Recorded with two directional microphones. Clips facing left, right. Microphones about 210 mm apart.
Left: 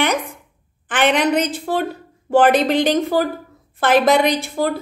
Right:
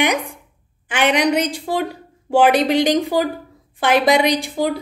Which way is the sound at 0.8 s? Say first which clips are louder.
Even; 10° right (ahead or behind).